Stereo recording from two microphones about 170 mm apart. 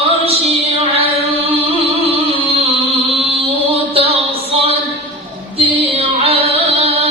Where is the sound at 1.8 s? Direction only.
35° right (ahead or behind).